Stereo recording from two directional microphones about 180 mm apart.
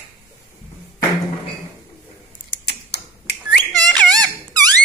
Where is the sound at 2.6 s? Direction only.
65° left (ahead or behind).